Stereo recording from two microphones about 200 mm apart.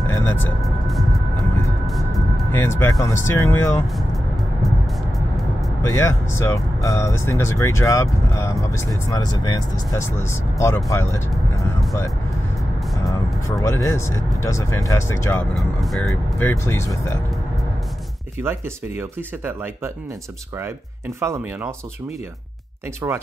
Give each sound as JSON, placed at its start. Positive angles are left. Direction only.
{"t": 0.1, "sound": "music", "side_deg": 10}
{"t": 0.6, "sound": "music", "side_deg": 0}
{"t": 1.9, "sound": "a sound", "side_deg": 0}
{"t": 2.6, "sound": "speech", "side_deg": 15}
{"t": 5.8, "sound": "speech", "side_deg": 15}
{"t": 13.0, "sound": "speech", "side_deg": 15}
{"t": 15.5, "sound": "speech", "side_deg": 0}
{"t": 18.4, "sound": "speech", "side_deg": -10}
{"t": 21.2, "sound": "speech", "side_deg": -15}
{"t": 23.0, "sound": "speech", "side_deg": -10}